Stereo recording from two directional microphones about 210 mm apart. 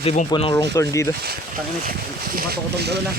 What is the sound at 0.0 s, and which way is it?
Speech, 30° left (ahead or behind).